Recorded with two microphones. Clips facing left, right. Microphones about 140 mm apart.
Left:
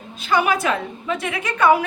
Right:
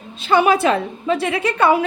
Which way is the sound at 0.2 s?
30° right (ahead or behind).